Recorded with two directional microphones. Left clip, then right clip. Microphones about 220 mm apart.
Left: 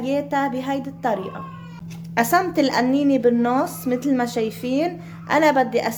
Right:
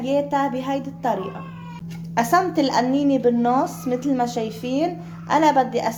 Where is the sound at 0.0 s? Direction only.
25° left (ahead or behind).